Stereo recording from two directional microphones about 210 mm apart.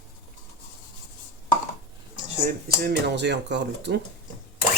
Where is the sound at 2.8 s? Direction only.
55° right (ahead or behind).